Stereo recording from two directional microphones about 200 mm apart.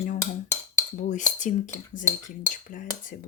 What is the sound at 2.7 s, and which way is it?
Speech, 45° left (ahead or behind).